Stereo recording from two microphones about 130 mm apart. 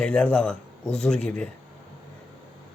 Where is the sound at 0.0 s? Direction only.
10° left (ahead or behind).